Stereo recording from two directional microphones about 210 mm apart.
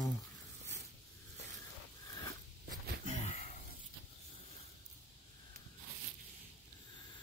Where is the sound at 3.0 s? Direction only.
35° left (ahead or behind).